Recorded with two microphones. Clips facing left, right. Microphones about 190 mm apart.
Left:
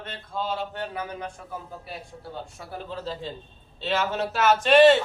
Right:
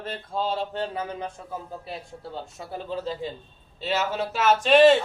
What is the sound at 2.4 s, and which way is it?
Speech, 20° right (ahead or behind).